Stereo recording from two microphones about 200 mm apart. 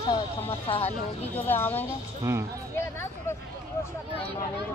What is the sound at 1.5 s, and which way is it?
Speech, 10° left (ahead or behind).